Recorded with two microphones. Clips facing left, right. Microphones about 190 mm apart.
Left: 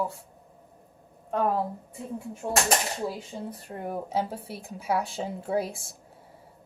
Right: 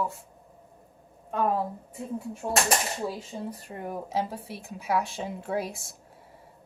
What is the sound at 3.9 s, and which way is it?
A woman's voice, 30° left (ahead or behind).